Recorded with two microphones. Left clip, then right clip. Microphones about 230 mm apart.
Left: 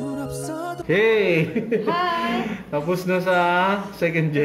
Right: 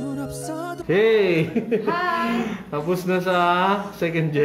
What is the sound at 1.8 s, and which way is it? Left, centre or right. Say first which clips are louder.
Speech: left 1 dB; centre.